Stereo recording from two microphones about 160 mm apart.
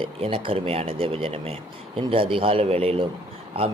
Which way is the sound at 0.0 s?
35° right (ahead or behind).